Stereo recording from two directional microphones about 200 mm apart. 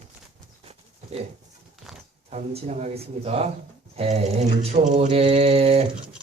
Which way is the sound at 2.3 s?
35° right (ahead or behind).